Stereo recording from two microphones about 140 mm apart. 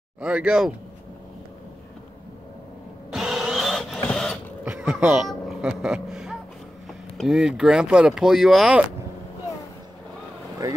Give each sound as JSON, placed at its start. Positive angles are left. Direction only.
{"t": 0.2, "sound": "speech", "side_deg": -5}
{"t": 3.1, "sound": "a sound", "side_deg": 0}
{"t": 4.6, "sound": "speech", "side_deg": -5}
{"t": 10.6, "sound": "speech", "side_deg": -25}